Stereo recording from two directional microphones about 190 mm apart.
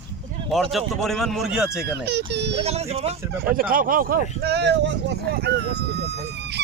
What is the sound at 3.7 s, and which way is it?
Speech, 45° right (ahead or behind).